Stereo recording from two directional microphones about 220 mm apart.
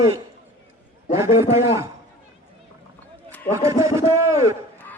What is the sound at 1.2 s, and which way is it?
Speech, 10° right (ahead or behind).